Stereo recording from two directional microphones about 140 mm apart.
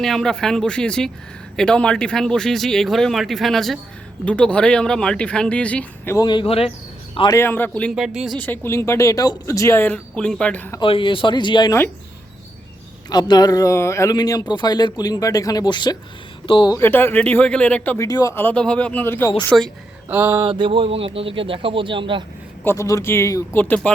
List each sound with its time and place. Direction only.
0.0 s speech: 5° left (ahead or behind)
6.1 s a man's voice: 35° left (ahead or behind)
7.3 s speech: 15° left (ahead or behind)
7.9 s speech: 5° right (ahead or behind)
8.4 s speech: 15° left (ahead or behind)
10.8 s speech: 35° left (ahead or behind)
13.1 s speech: 30° left (ahead or behind)
16.7 s speech: 15° left (ahead or behind)
17.9 s speech: 25° left (ahead or behind)
19.5 s speech: 5° left (ahead or behind)
20.1 s a sound: 15° right (ahead or behind)
20.4 s speech: 35° right (ahead or behind)
22.6 s speech: 20° left (ahead or behind)